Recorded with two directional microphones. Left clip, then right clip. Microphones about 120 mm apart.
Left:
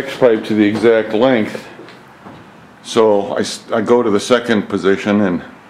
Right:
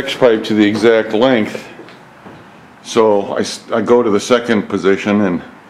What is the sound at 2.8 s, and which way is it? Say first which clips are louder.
Speech: even; 15° right (ahead or behind).